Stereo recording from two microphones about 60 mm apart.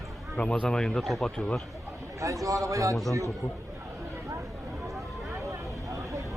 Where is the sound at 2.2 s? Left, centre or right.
Right.